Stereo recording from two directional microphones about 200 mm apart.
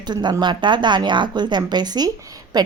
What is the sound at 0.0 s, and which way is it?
A woman's voice, 20° right (ahead or behind).